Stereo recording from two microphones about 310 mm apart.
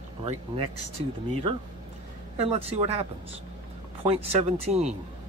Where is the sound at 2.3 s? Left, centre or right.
Centre.